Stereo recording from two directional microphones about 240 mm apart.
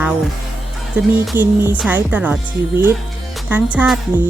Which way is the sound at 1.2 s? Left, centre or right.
Centre.